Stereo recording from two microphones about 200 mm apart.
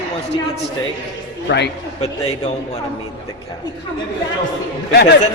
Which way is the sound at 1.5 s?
60° left (ahead or behind).